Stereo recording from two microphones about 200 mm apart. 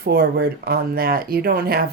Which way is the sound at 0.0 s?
50° right (ahead or behind).